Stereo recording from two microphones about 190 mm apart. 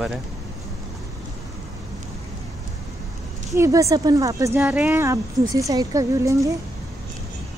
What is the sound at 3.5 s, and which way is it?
Speech, 15° right (ahead or behind).